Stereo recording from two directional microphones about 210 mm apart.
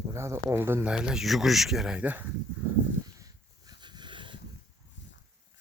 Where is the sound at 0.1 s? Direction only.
15° right (ahead or behind).